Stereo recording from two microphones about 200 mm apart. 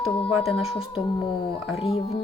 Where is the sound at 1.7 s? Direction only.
30° left (ahead or behind).